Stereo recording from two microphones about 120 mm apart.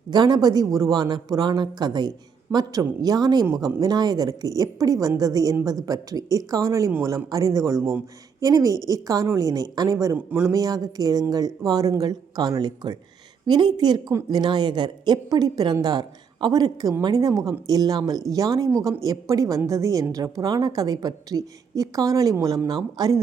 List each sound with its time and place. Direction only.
0.1 s a woman's voice: 35° right (ahead or behind)